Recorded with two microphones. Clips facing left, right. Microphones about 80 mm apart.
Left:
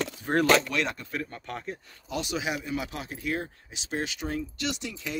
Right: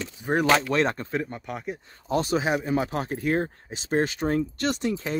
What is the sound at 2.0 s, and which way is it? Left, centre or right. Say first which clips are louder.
Speech: right 7 dB; right.